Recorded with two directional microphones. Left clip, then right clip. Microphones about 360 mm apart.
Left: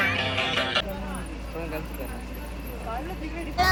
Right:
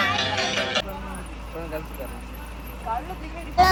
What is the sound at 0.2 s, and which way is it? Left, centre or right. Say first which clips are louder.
Music: right 1 dB; right.